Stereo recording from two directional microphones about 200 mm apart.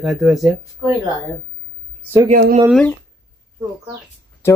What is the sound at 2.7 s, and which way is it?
Speech, 5° left (ahead or behind).